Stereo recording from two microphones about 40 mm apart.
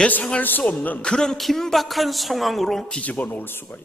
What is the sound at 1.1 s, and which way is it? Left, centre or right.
Speech, centre.